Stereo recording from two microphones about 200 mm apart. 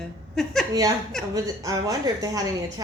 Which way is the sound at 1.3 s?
15° right (ahead or behind).